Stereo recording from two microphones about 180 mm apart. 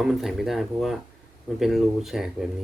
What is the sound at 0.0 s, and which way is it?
Speech, centre (ahead or behind).